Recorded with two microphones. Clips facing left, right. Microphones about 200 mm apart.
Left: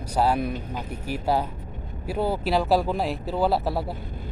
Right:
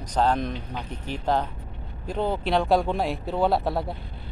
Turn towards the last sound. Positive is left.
turn(degrees=0)  # may be behind; listen again after turning